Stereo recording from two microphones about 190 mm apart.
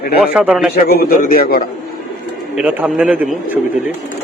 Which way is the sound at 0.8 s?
50° left (ahead or behind).